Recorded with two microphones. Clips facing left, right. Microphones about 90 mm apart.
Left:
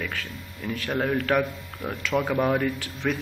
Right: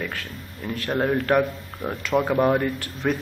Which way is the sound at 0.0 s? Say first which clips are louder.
Right 1 dB; centre (ahead or behind).